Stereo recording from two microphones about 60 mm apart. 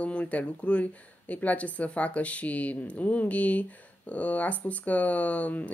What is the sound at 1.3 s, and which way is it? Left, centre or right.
Speech, left.